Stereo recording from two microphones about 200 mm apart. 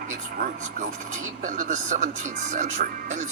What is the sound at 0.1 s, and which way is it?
Speech, 40° right (ahead or behind).